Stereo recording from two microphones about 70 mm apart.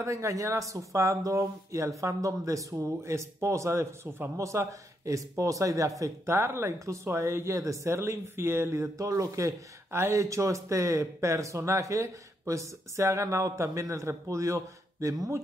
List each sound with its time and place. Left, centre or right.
0.0 s a man's voice: right
6.3 s speech: right
9.8 s a man's voice: right